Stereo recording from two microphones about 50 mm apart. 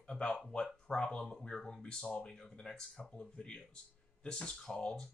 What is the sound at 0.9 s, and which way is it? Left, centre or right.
Speech, centre.